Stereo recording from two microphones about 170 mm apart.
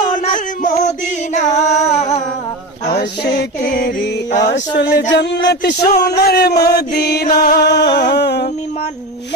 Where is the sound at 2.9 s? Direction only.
70° left (ahead or behind).